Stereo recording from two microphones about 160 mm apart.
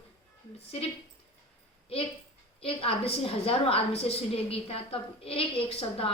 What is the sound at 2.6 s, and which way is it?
A woman's voice, 35° left (ahead or behind).